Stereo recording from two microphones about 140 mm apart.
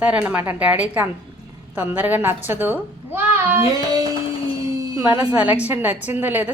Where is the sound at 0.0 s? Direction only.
10° right (ahead or behind).